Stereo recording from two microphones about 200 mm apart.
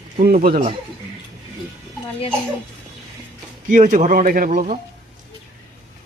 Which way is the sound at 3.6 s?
40° right (ahead or behind).